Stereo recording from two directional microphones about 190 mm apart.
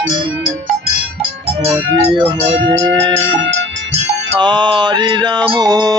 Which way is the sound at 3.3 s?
75° right (ahead or behind).